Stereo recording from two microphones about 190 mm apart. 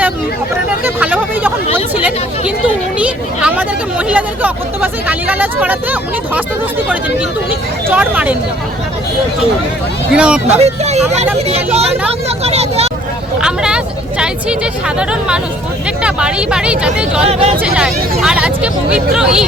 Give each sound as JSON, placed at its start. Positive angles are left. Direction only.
{"t": 0.9, "sound": "hubbub", "side_deg": -10}
{"t": 2.6, "sound": "a sound", "side_deg": -5}
{"t": 7.9, "sound": "speech", "side_deg": -5}
{"t": 10.1, "sound": "speech", "side_deg": -5}
{"t": 10.6, "sound": "speech", "side_deg": -35}
{"t": 13.4, "sound": "speech", "side_deg": -5}
{"t": 17.2, "sound": "speech", "side_deg": -35}
{"t": 17.6, "sound": "speech", "side_deg": -5}